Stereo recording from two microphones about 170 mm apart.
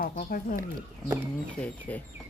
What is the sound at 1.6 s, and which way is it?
Speech, 10° left (ahead or behind).